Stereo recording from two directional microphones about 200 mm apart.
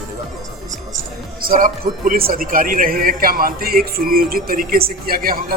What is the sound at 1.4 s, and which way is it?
A man's voice, 45° right (ahead or behind).